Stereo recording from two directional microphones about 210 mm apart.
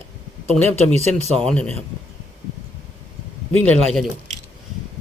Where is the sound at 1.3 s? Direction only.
5° left (ahead or behind).